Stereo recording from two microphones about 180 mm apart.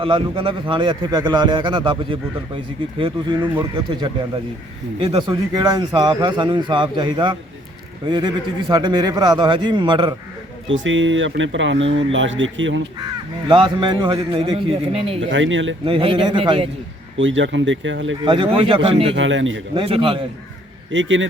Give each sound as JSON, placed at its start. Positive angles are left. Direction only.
{"t": 0.0, "sound": "speech", "side_deg": -30}
{"t": 4.9, "sound": "speech", "side_deg": -30}
{"t": 10.7, "sound": "speech", "side_deg": -90}
{"t": 13.5, "sound": "speech", "side_deg": -25}
{"t": 15.2, "sound": "speech", "side_deg": -90}
{"t": 15.9, "sound": "speech", "side_deg": -30}
{"t": 17.2, "sound": "speech", "side_deg": -90}
{"t": 18.3, "sound": "speech", "side_deg": -30}
{"t": 19.1, "sound": "speech", "side_deg": -90}
{"t": 19.7, "sound": "speech", "side_deg": -30}
{"t": 20.9, "sound": "speech", "side_deg": -90}